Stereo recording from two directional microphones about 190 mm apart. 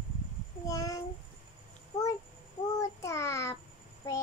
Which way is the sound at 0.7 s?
20° left (ahead or behind).